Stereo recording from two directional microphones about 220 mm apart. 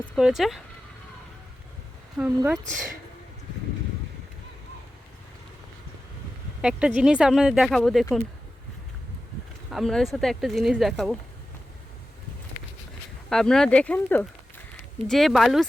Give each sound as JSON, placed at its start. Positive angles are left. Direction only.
{"t": 0.0, "sound": "speech", "side_deg": 0}
{"t": 2.1, "sound": "speech", "side_deg": -10}
{"t": 6.6, "sound": "speech", "side_deg": -5}
{"t": 9.7, "sound": "speech", "side_deg": 0}
{"t": 13.3, "sound": "speech", "side_deg": 0}